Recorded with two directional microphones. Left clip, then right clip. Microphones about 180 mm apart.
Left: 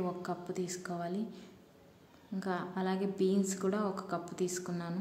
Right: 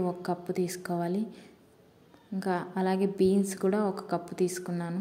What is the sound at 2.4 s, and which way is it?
A woman's voice, 25° right (ahead or behind).